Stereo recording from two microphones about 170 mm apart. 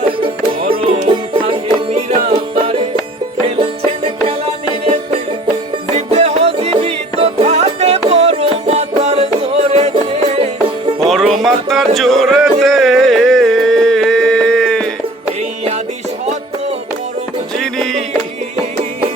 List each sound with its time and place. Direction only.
0.7 s music: 35° right (ahead or behind)
11.0 s music: centre (ahead or behind)
17.6 s music: 5° left (ahead or behind)